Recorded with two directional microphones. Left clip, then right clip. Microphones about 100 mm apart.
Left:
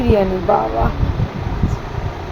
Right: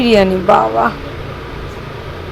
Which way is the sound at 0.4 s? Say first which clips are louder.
Right 5 dB; 45° right (ahead or behind).